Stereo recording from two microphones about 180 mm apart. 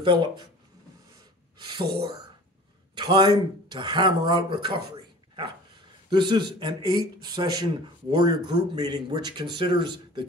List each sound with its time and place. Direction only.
0.0 s speech: 25° right (ahead or behind)
2.9 s speech: 25° right (ahead or behind)
6.0 s speech: 25° right (ahead or behind)